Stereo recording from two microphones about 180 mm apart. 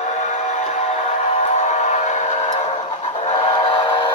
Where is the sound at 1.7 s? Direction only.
40° left (ahead or behind).